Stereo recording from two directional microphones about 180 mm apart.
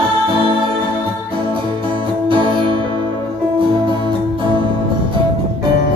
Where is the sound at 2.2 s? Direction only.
25° right (ahead or behind).